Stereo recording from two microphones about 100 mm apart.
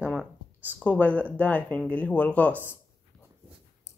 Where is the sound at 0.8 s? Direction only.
15° left (ahead or behind).